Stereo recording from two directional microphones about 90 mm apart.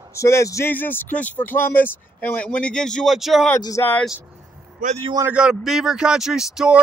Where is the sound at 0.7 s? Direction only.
20° left (ahead or behind).